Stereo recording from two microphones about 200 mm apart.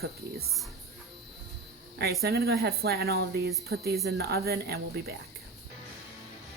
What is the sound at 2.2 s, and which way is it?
A woman's voice, 50° right (ahead or behind).